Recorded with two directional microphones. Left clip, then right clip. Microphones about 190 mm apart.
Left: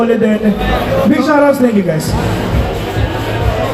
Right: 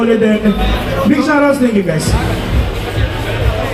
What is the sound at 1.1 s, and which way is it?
Speech, 40° left (ahead or behind).